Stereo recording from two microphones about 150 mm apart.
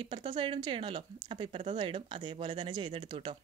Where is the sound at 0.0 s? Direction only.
30° right (ahead or behind).